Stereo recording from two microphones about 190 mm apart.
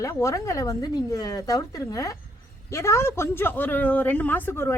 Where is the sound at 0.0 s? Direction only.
15° left (ahead or behind).